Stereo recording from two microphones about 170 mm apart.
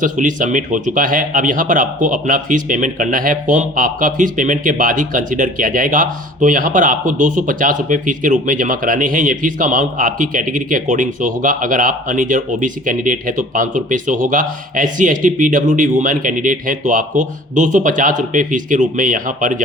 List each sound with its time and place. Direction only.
0.0 s speech: 50° right (ahead or behind)